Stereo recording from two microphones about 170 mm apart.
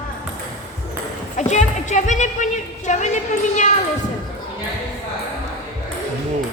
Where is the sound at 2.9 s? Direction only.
45° left (ahead or behind).